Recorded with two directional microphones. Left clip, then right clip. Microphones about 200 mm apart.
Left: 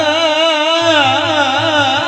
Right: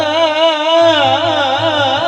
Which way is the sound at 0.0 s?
30° left (ahead or behind).